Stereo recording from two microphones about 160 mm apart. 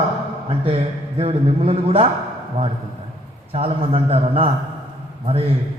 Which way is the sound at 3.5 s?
35° right (ahead or behind).